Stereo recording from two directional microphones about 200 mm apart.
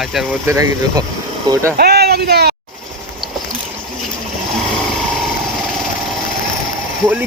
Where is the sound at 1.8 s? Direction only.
55° right (ahead or behind).